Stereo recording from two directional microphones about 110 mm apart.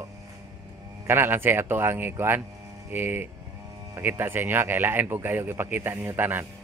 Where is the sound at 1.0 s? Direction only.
20° right (ahead or behind).